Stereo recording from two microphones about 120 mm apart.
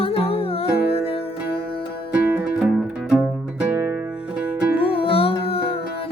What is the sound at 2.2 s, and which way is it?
Music, 20° right (ahead or behind).